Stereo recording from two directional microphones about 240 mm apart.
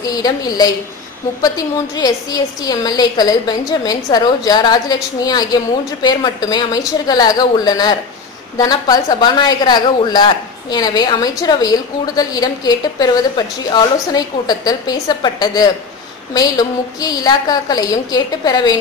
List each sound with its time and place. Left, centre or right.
0.0 s a woman's voice: centre
2.0 s a woman's voice: centre